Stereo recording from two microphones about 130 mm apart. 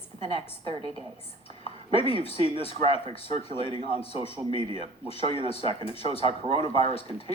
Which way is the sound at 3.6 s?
40° right (ahead or behind).